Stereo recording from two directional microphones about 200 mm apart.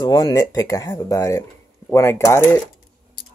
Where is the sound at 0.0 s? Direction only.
20° left (ahead or behind).